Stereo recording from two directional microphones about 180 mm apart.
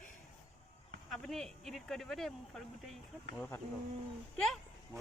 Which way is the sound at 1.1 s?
Centre (ahead or behind).